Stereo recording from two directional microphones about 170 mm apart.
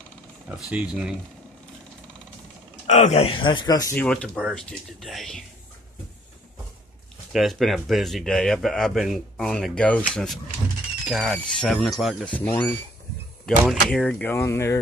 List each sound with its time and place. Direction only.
0.5 s speech: 5° right (ahead or behind)
2.9 s speech: 40° left (ahead or behind); by 3.9 s 20° left (ahead or behind)
3.9 s speech: 10° left (ahead or behind)
7.3 s speech: centre (ahead or behind)
12.4 s speech: 10° left (ahead or behind)